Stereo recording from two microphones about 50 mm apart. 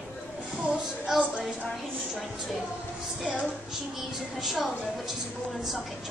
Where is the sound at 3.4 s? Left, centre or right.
Centre.